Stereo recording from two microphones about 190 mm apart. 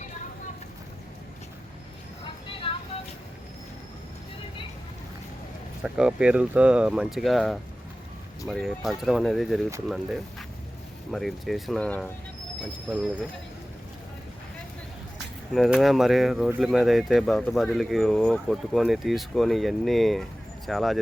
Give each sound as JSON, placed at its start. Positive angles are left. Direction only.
{"t": 2.2, "sound": "vehicle", "side_deg": 30}
{"t": 5.8, "sound": "speech", "side_deg": -5}
{"t": 15.5, "sound": "speech", "side_deg": 0}